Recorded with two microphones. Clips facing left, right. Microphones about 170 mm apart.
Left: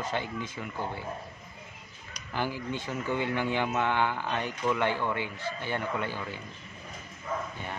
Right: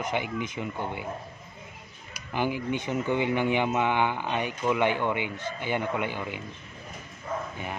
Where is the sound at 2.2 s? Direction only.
15° right (ahead or behind).